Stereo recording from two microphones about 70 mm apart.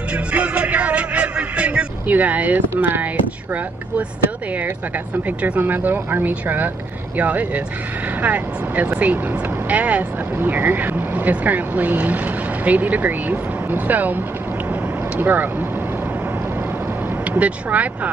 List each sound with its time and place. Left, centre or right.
0.1 s music: centre
5.1 s speech: right
17.3 s speech: right